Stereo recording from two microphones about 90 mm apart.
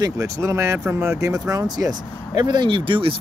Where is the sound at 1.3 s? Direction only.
45° right (ahead or behind); by 3.1 s 70° right (ahead or behind).